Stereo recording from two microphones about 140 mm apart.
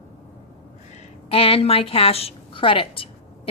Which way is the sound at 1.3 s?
45° left (ahead or behind).